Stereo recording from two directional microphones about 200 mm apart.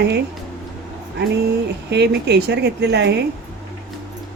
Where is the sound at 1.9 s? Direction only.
55° right (ahead or behind).